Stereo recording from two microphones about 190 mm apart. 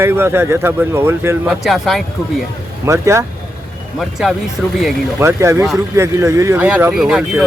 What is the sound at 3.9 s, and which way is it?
Speech, centre (ahead or behind).